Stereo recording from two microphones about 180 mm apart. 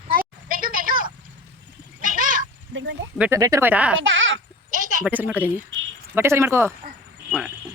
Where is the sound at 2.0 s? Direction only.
50° right (ahead or behind).